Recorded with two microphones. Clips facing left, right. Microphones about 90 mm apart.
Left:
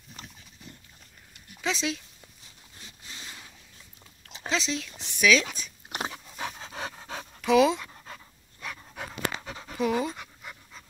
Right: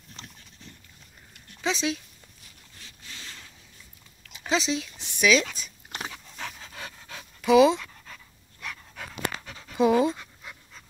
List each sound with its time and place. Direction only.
0.1 s dog: 5° left (ahead or behind)
1.6 s speech: 5° right (ahead or behind)
2.8 s zipper: 20° left (ahead or behind)
4.5 s speech: 5° right (ahead or behind)
6.1 s dog: 10° left (ahead or behind)
6.6 s pant: 30° left (ahead or behind)
7.4 s speech: 5° right (ahead or behind)
7.8 s dog: 25° left (ahead or behind)
8.6 s pant: 15° left (ahead or behind)
9.8 s pant: 20° right (ahead or behind)
10.1 s pant: 10° left (ahead or behind)